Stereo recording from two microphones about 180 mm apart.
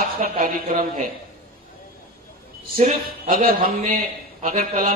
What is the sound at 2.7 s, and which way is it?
A man's voice, 45° right (ahead or behind).